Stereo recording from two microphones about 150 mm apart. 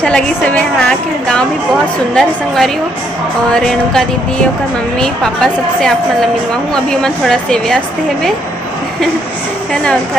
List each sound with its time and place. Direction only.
0.0 s speech: 5° left (ahead or behind)
5.0 s speech: 5° left (ahead or behind)